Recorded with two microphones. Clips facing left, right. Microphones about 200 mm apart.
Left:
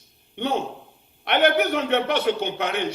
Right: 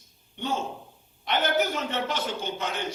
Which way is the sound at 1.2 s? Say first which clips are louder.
Left 6 dB; 65° left (ahead or behind).